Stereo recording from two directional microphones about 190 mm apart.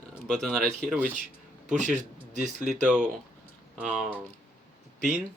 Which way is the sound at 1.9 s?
40° right (ahead or behind).